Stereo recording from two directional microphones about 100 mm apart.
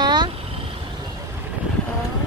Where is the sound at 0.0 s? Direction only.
45° right (ahead or behind).